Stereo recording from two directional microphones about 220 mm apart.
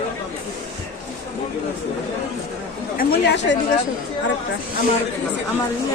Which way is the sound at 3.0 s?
45° left (ahead or behind).